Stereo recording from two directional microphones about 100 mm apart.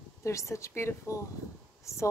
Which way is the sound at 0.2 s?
30° left (ahead or behind).